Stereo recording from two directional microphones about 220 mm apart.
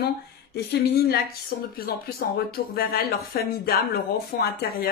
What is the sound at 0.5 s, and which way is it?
Speech, 45° left (ahead or behind).